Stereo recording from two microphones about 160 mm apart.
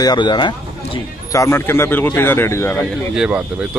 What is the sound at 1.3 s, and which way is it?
Speech, 15° left (ahead or behind).